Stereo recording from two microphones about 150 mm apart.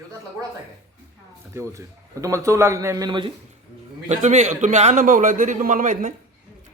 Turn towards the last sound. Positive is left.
turn(degrees=-60)  # may be behind; listen again after turning